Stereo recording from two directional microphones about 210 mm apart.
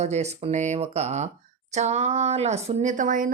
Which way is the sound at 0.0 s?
30° right (ahead or behind).